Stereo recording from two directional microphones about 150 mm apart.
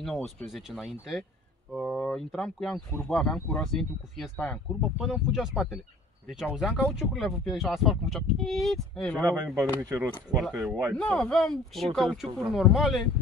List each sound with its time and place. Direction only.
0.0 s speech: centre (ahead or behind)
9.8 s speech: 15° right (ahead or behind)
10.3 s speech: centre (ahead or behind)